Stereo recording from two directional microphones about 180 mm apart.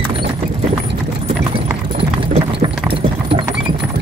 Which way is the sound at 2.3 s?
30° right (ahead or behind).